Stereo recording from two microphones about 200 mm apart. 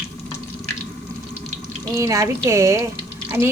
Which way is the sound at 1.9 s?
15° right (ahead or behind).